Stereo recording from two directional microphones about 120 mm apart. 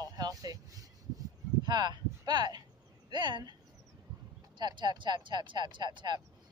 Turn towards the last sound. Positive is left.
turn(degrees=-40)  # may be behind; listen again after turning